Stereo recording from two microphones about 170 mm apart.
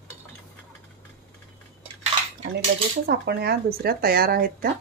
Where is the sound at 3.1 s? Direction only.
70° right (ahead or behind).